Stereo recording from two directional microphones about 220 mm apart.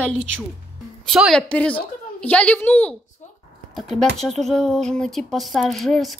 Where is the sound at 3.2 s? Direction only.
35° left (ahead or behind).